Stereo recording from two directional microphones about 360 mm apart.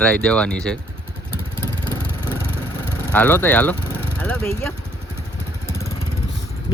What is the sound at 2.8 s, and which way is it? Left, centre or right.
Speech, centre.